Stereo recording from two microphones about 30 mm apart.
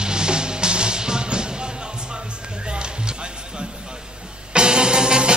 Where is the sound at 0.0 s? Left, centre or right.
Right.